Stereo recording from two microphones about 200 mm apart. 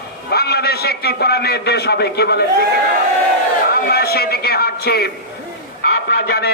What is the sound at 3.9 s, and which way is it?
A man's voice, 50° left (ahead or behind).